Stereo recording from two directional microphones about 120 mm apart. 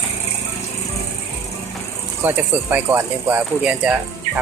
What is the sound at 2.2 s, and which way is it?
Speech, 15° right (ahead or behind).